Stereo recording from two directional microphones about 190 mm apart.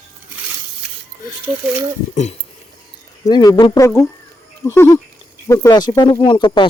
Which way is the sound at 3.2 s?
20° left (ahead or behind).